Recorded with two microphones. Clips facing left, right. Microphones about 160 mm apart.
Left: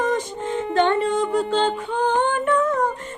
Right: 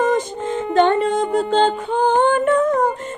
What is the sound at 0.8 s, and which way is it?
Music, 40° right (ahead or behind).